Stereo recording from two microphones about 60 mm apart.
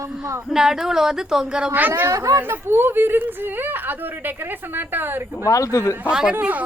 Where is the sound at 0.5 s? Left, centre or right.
Centre.